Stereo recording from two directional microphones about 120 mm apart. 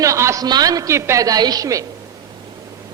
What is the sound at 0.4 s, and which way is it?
A man's voice, 35° right (ahead or behind).